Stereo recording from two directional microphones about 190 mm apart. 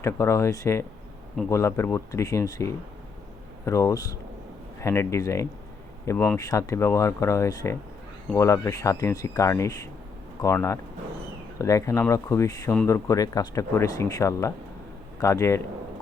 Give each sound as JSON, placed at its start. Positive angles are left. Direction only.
{"t": 0.0, "sound": "speech", "side_deg": 15}